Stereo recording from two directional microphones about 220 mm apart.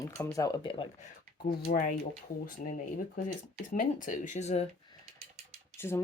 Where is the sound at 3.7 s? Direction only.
35° left (ahead or behind).